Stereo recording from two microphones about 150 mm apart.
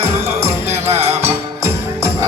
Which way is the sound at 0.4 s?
15° right (ahead or behind).